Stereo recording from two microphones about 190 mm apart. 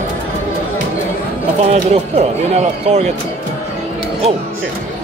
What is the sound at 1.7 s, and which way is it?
Speech, 35° right (ahead or behind).